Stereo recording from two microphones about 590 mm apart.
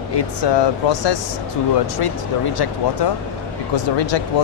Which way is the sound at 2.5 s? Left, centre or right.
Left.